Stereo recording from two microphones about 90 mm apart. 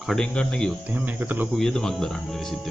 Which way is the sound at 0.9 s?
20° right (ahead or behind).